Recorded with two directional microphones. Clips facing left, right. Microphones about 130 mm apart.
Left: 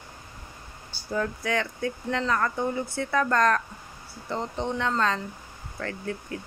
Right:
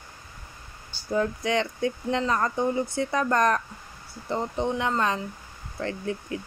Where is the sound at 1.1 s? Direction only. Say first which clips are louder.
Right 3 dB; 20° right (ahead or behind).